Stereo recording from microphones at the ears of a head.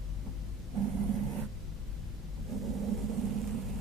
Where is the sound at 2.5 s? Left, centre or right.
Right.